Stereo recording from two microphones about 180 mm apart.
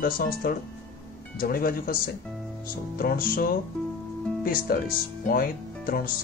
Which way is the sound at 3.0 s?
55° left (ahead or behind).